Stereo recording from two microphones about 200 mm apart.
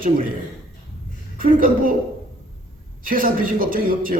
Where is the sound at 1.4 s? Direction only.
45° right (ahead or behind).